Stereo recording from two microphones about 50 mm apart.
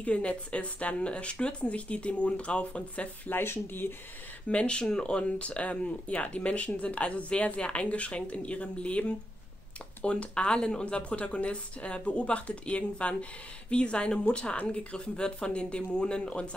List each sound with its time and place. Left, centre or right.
0.0 s a woman's voice: left
3.3 s speech: left
4.5 s a woman's voice: left